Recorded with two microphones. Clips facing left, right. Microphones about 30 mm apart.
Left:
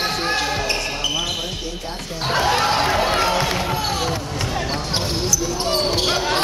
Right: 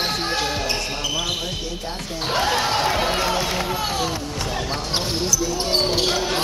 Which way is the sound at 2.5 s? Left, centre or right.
Left.